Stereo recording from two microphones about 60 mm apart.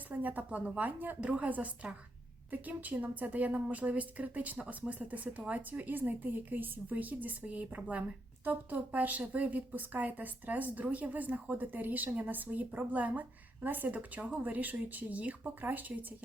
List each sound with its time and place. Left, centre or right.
0.1 s a woman's voice: right